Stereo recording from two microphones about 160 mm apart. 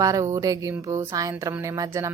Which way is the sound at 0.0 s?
20° right (ahead or behind).